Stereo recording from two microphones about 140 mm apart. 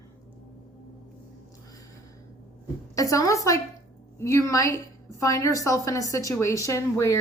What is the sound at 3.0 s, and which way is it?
A woman's voice, 25° left (ahead or behind).